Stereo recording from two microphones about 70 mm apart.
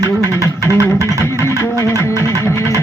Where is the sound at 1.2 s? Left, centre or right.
Left.